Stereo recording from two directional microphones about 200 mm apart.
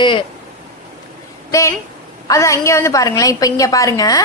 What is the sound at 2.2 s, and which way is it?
A woman's voice, 15° left (ahead or behind).